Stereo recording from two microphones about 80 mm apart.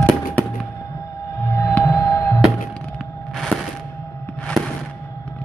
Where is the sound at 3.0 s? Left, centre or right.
Centre.